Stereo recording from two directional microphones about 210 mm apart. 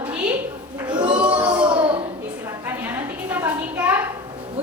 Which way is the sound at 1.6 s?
25° right (ahead or behind).